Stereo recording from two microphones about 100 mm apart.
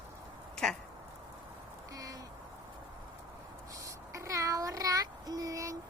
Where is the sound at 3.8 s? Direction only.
30° right (ahead or behind).